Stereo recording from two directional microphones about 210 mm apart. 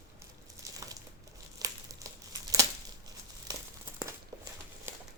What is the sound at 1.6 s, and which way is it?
Crumpling, 15° right (ahead or behind).